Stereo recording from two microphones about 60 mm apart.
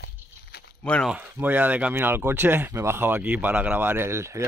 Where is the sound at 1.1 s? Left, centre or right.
Right.